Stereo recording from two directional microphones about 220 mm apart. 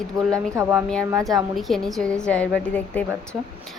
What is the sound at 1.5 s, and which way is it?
Speech, centre (ahead or behind).